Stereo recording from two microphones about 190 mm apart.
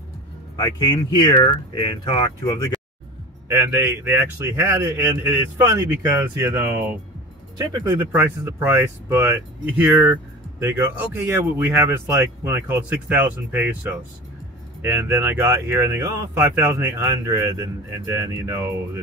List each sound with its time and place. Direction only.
0.6 s speech: 20° left (ahead or behind)
2.7 s music: 5° left (ahead or behind)
3.4 s speech: 15° right (ahead or behind)